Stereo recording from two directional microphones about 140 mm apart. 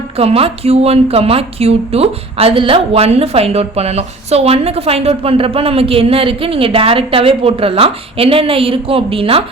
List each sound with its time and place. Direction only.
0.2 s a woman's voice: 45° right (ahead or behind)